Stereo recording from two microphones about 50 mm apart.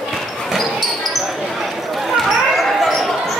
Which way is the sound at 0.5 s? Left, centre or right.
Centre.